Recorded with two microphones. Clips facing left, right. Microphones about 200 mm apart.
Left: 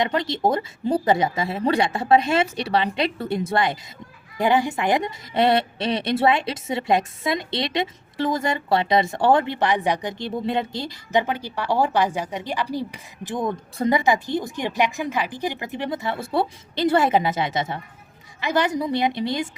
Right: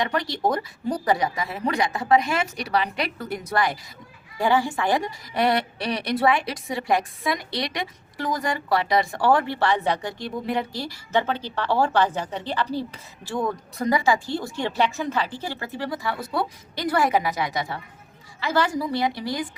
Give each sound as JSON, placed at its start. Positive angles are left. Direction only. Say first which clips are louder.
{"t": 0.0, "sound": "a woman's voice", "louder": "left 3 dB", "side_deg": 25}